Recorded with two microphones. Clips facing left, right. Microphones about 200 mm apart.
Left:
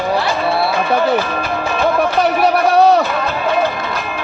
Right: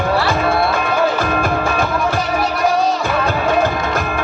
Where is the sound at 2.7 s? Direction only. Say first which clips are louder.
Left 7 dB; 65° left (ahead or behind).